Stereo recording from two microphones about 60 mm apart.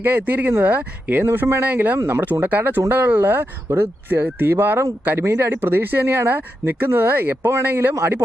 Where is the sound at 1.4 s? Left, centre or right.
Right.